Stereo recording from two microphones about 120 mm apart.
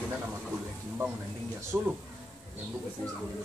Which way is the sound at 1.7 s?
20° right (ahead or behind).